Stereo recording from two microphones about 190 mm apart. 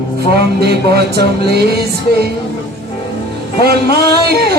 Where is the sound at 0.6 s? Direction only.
60° right (ahead or behind).